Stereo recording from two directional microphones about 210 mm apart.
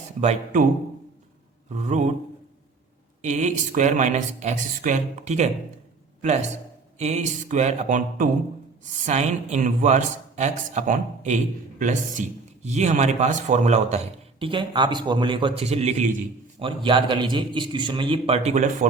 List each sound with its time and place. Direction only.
0.2 s a man's voice: 35° right (ahead or behind)
1.7 s a man's voice: 35° right (ahead or behind)
3.2 s a man's voice: 35° right (ahead or behind)
7.0 s a man's voice: 35° right (ahead or behind)